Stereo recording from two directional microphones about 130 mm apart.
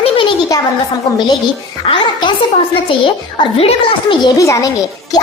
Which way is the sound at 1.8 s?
40° left (ahead or behind).